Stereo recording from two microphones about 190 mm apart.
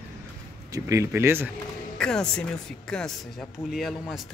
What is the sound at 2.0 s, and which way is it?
Speech, 5° left (ahead or behind).